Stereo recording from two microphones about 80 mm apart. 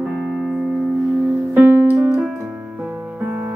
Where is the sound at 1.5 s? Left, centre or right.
Right.